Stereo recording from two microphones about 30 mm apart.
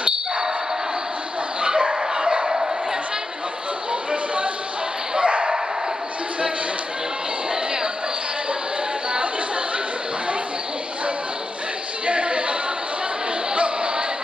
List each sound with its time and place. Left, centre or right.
1.6 s bow-wow: right
5.1 s dog: right
12.1 s a sound: right